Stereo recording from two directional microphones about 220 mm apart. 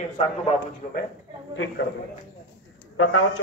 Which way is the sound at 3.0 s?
75° left (ahead or behind).